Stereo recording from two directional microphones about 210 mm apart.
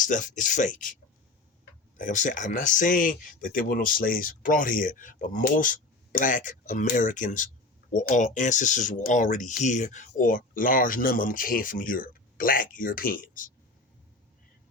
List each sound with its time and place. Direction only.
0.0 s speech: 35° left (ahead or behind)
2.0 s speech: 40° left (ahead or behind)